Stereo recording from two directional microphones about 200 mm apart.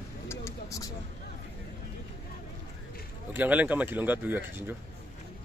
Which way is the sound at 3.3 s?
10° right (ahead or behind).